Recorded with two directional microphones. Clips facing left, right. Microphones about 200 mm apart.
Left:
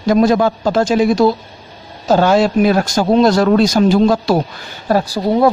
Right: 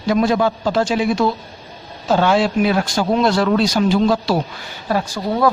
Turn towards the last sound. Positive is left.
turn(degrees=40)  # may be behind; listen again after turning